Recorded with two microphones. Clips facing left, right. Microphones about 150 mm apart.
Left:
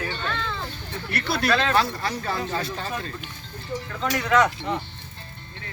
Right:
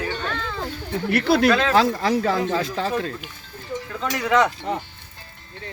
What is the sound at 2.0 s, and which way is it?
Speech, 90° right.